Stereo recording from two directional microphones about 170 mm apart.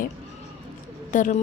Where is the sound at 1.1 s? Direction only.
50° left (ahead or behind).